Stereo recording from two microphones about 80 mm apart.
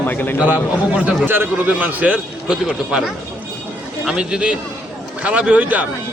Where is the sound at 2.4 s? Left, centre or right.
Centre.